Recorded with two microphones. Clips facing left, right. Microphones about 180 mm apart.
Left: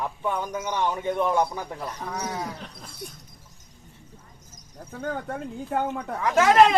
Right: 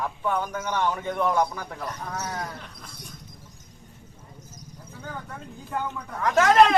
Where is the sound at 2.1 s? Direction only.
10° left (ahead or behind).